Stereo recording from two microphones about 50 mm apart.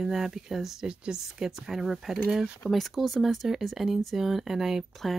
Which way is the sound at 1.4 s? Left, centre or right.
Centre.